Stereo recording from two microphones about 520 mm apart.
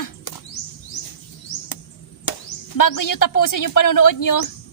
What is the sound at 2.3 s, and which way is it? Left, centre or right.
Chop, left.